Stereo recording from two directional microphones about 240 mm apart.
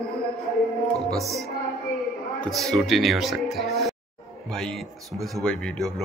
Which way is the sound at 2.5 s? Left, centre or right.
Centre.